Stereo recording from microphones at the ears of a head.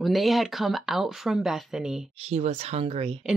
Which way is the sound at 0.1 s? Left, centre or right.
Centre.